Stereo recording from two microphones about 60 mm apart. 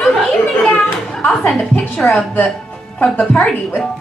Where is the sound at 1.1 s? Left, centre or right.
Centre.